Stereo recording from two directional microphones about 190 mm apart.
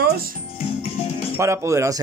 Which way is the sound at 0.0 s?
50° right (ahead or behind).